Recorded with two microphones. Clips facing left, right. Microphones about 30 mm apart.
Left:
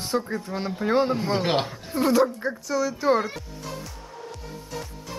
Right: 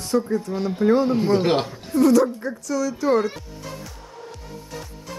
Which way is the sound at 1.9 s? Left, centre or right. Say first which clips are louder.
Right 4 dB; left.